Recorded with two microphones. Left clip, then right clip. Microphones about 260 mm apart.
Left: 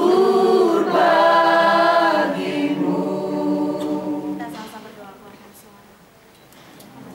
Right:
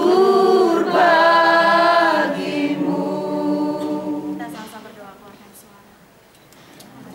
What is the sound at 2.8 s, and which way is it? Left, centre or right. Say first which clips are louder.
Choir: even; left.